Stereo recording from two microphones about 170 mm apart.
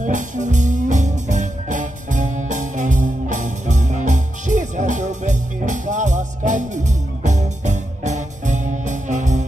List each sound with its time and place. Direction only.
0.0 s music: 45° right (ahead or behind)